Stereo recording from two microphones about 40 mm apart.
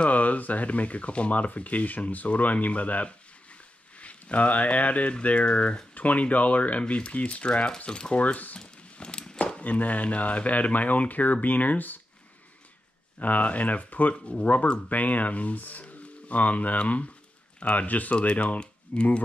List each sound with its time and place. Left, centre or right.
0.0 s speech: left
8.2 s speech: left
8.9 s walk: left
9.4 s speech: left
13.2 s speech: left
17.8 s speech: left
18.1 s speech: left